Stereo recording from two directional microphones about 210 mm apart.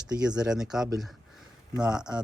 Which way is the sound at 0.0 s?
5° right (ahead or behind).